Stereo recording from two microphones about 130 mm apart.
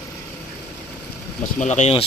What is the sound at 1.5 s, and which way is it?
Speech, 65° left (ahead or behind).